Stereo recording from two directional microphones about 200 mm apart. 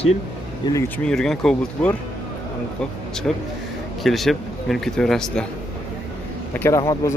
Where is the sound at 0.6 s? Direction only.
20° left (ahead or behind).